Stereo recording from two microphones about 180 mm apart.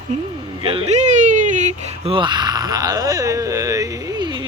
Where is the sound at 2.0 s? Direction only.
25° right (ahead or behind).